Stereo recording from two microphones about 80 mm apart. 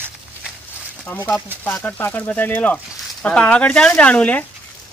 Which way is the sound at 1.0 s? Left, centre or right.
Left.